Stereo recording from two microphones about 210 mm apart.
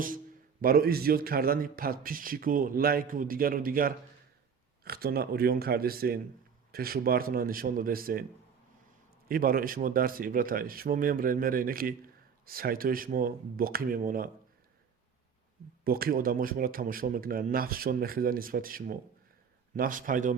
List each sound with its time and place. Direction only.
0.6 s a man's voice: 45° right (ahead or behind)
9.3 s a man's voice: 45° right (ahead or behind)
15.8 s a man's voice: 45° right (ahead or behind)